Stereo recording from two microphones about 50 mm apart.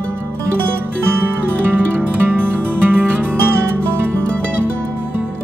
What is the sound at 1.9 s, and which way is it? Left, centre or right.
Music, right.